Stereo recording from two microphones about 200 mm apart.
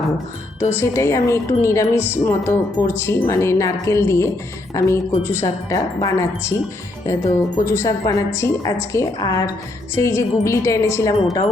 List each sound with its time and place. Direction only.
0.7 s speech: 15° left (ahead or behind)